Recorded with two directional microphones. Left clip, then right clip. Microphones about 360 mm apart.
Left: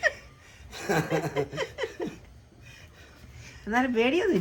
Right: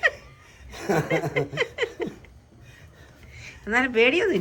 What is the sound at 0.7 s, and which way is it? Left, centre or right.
Speech, centre.